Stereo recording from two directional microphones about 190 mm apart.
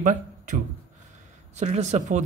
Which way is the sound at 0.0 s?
40° right (ahead or behind).